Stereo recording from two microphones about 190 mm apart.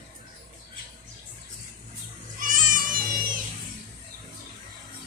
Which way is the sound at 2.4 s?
45° right (ahead or behind).